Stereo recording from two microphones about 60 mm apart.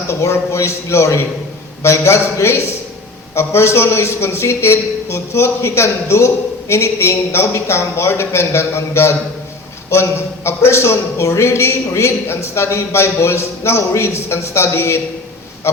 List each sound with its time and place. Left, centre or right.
0.1 s a man's voice: left